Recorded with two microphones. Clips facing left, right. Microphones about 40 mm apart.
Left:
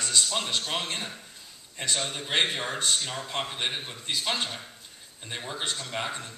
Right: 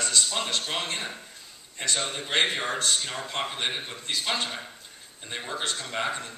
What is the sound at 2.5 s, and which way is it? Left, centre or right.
A man's voice, centre.